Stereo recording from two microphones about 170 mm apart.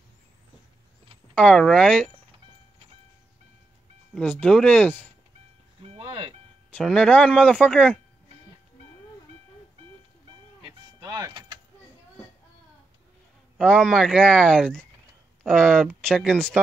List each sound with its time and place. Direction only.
1.3 s speech: 5° left (ahead or behind)
4.1 s speech: 10° left (ahead or behind)
5.8 s music: 35° right (ahead or behind)
6.7 s speech: 5° left (ahead or behind)
11.0 s vehicle: 20° right (ahead or behind)
13.6 s speech: 5° left (ahead or behind)